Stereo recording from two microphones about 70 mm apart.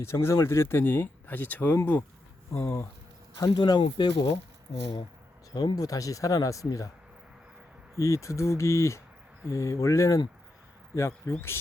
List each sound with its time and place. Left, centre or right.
0.0 s speech: left
3.3 s speech: left
5.5 s speech: left
7.9 s speech: left